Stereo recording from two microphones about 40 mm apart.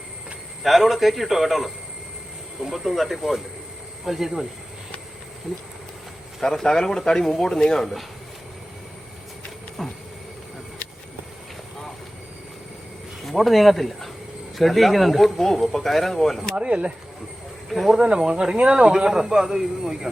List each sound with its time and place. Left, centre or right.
0.6 s speech: centre
2.7 s a man's voice: centre
6.4 s speech: centre
13.2 s speech: centre
16.6 s speech: right
17.7 s speech: centre
17.9 s a man's voice: right